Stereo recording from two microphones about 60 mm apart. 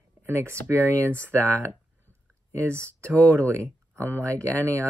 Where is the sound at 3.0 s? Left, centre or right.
Left.